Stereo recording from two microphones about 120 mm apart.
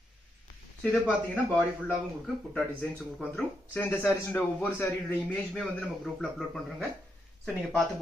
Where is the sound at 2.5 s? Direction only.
10° left (ahead or behind).